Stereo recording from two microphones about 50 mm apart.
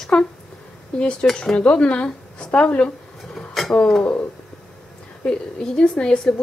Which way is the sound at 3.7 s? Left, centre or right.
Left.